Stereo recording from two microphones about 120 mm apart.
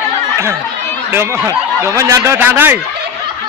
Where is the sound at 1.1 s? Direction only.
20° right (ahead or behind).